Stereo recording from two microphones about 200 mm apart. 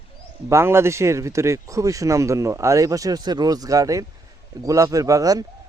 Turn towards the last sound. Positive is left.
turn(degrees=-15)  # may be behind; listen again after turning